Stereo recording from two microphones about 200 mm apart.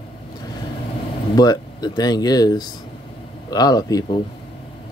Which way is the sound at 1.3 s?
20° left (ahead or behind).